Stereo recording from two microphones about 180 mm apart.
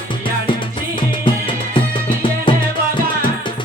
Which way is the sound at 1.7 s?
30° left (ahead or behind).